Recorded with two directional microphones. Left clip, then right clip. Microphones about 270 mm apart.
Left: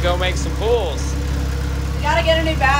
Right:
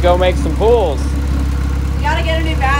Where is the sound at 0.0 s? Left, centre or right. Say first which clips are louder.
Right 7 dB; centre.